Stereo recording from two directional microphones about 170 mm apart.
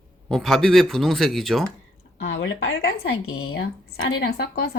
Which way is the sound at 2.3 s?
90° left.